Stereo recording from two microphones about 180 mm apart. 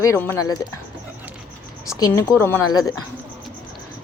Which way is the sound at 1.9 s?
20° left (ahead or behind).